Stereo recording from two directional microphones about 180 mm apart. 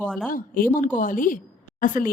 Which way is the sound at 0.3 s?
50° left (ahead or behind).